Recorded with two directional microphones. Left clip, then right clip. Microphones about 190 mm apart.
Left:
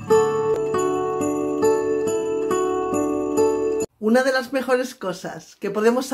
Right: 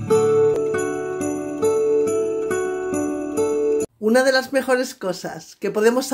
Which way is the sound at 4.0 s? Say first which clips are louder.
Right 2 dB; 10° right (ahead or behind).